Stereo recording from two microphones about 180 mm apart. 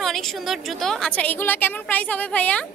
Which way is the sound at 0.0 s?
Centre (ahead or behind).